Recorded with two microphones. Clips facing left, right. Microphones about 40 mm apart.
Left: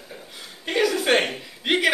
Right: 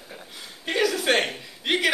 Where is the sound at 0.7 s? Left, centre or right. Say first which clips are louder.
Left 2 dB; centre.